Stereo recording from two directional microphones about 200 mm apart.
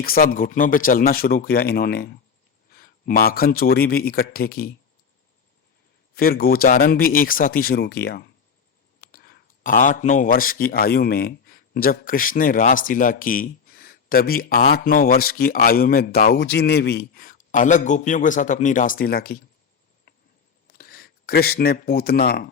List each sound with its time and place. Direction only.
0.0 s speech: 45° left (ahead or behind)
6.1 s speech: 45° left (ahead or behind)
20.7 s speech: 50° left (ahead or behind)